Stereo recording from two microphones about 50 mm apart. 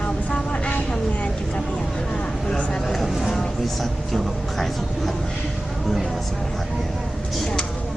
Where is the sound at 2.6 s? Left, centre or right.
Left.